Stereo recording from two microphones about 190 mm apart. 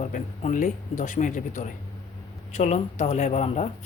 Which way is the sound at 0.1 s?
40° left (ahead or behind).